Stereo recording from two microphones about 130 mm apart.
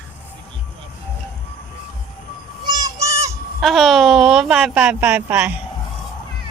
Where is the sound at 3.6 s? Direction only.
Centre (ahead or behind).